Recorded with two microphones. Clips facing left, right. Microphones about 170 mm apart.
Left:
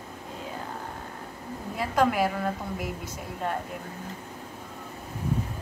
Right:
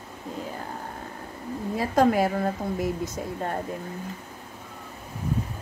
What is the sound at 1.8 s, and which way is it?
Speech, 40° right (ahead or behind).